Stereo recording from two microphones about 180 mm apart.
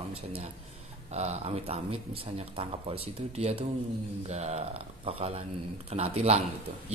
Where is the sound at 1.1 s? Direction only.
35° right (ahead or behind).